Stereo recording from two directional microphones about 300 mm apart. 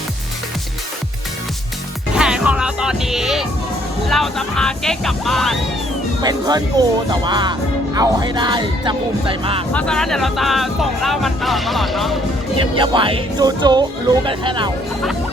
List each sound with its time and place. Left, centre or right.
2.1 s music: centre
4.1 s speech: centre
6.2 s speech: centre
9.7 s speech: centre
12.5 s speech: centre